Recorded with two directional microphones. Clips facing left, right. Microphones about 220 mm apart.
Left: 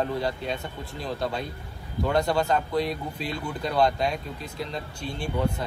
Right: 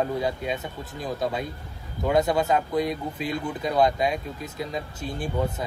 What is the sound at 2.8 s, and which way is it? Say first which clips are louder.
Speech: right 2 dB; 45° right (ahead or behind).